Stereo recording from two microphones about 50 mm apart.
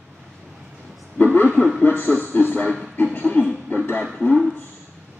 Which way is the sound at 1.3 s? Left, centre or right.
Left.